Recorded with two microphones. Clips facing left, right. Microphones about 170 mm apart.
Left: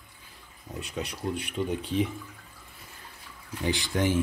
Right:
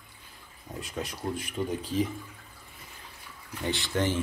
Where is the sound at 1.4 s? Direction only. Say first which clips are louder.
Left 1 dB; 40° right (ahead or behind).